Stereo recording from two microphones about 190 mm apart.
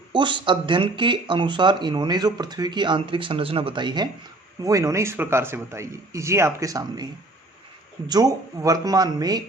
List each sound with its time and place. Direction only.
0.1 s speech: 25° right (ahead or behind)